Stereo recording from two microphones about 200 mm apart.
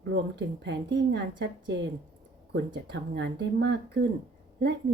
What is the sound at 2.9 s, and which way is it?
Speech, 60° right (ahead or behind).